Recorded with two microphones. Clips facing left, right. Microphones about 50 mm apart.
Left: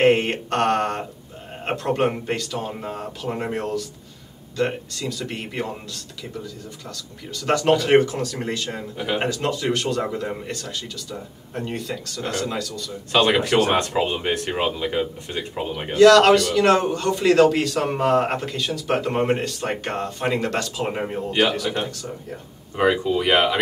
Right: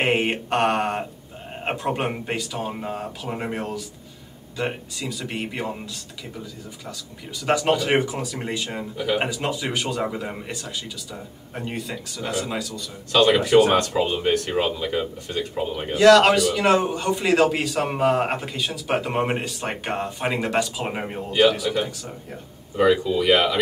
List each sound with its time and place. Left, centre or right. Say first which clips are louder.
0.0 s mantra: left 4 dB; centre
1.6 s a man's voice: left 3 dB; centre
7.3 s a man's voice: left 2 dB; centre
13.7 s speech: even; centre
15.9 s a man's voice: left 2 dB; centre
21.3 s speech: right 3 dB; centre
22.8 s speech: right 1 dB; left